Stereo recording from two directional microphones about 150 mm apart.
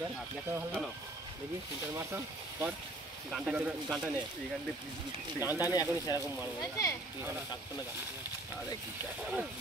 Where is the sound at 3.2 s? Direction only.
5° right (ahead or behind).